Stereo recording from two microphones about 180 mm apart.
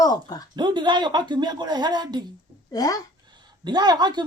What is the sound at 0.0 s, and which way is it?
Speech, 20° left (ahead or behind).